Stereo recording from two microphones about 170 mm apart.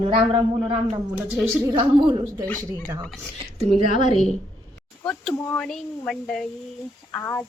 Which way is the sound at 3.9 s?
45° left (ahead or behind).